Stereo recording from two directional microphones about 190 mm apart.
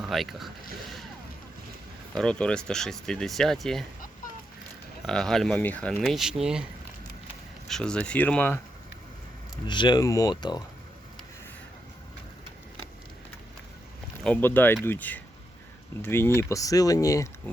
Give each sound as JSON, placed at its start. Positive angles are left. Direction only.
{"t": 0.0, "sound": "speech", "side_deg": 0}
{"t": 2.1, "sound": "speech", "side_deg": 5}
{"t": 5.0, "sound": "speech", "side_deg": 0}
{"t": 7.7, "sound": "speech", "side_deg": 5}
{"t": 9.6, "sound": "speech", "side_deg": 25}
{"t": 14.3, "sound": "speech", "side_deg": 10}